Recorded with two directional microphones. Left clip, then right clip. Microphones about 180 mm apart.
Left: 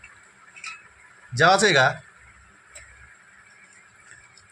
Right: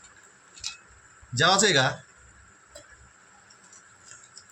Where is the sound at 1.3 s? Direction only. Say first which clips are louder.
Left 4 dB; 45° left (ahead or behind).